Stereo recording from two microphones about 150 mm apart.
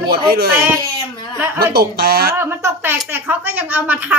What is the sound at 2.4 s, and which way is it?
A child's voice, 15° right (ahead or behind).